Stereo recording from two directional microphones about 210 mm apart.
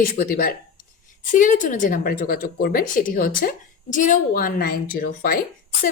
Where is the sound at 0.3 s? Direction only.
45° left (ahead or behind).